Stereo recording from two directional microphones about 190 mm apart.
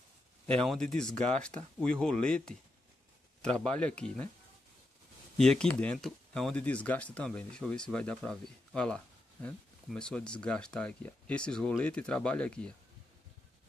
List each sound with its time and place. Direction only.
0.7 s speech: 5° left (ahead or behind)
5.4 s speech: 5° left (ahead or behind)